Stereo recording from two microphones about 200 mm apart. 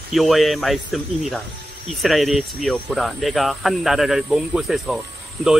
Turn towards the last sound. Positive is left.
turn(degrees=0)  # may be behind; listen again after turning